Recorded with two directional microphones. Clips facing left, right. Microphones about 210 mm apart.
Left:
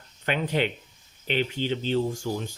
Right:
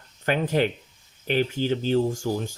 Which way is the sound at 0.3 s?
45° right (ahead or behind).